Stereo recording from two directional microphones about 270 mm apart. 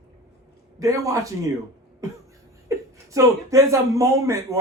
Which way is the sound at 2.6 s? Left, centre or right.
Centre.